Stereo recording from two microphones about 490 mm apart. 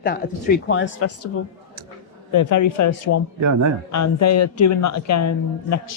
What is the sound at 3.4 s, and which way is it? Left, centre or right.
Speech, right.